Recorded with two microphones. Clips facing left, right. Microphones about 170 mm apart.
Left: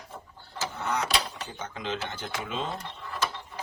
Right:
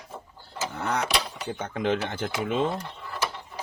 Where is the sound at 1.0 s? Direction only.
10° right (ahead or behind).